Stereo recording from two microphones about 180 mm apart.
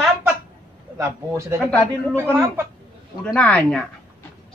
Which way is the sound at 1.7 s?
10° left (ahead or behind).